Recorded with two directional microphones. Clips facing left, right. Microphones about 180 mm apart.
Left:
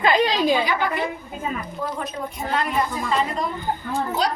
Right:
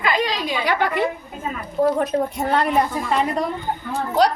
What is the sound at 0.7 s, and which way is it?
Speech, 70° right (ahead or behind).